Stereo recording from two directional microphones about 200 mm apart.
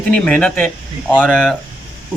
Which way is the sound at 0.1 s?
5° left (ahead or behind).